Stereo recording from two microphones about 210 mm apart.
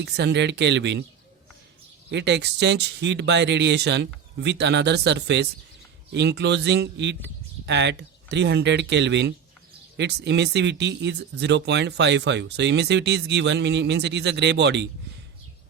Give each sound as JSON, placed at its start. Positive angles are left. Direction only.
{"t": 0.0, "sound": "speech", "side_deg": -55}
{"t": 2.0, "sound": "speech", "side_deg": -55}